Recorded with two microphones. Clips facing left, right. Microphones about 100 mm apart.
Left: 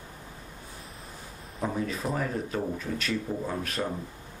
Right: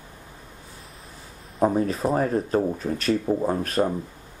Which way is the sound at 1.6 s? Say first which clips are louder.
Right 9 dB; 40° right (ahead or behind).